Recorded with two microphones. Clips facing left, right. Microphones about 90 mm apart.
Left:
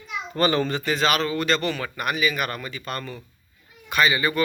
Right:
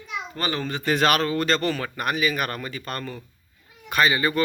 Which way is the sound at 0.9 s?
50° right (ahead or behind).